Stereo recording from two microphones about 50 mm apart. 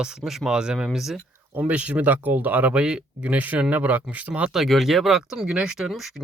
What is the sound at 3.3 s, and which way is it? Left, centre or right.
Speech, right.